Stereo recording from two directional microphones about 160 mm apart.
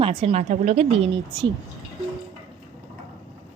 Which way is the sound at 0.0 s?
35° right (ahead or behind).